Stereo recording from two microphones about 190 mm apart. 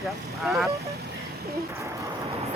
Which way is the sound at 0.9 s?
55° right (ahead or behind).